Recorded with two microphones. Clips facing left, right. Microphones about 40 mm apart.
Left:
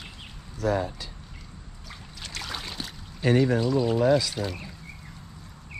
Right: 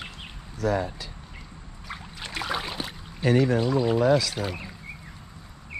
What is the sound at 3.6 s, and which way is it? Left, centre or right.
Speech, centre.